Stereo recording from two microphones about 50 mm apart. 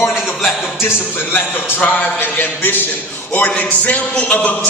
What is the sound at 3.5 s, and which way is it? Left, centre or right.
Speech, left.